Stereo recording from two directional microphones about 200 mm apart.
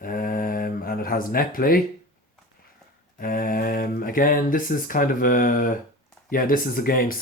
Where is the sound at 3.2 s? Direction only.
45° left (ahead or behind).